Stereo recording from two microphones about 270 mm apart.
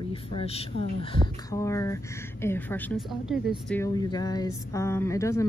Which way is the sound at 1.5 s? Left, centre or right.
Centre.